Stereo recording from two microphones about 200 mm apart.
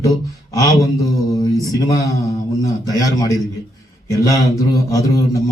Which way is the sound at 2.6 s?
15° left (ahead or behind).